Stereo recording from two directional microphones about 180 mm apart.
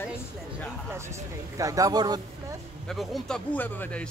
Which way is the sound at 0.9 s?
15° right (ahead or behind).